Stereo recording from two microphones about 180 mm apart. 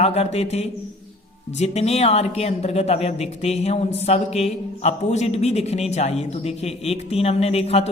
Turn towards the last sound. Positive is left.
turn(degrees=35)  # may be behind; listen again after turning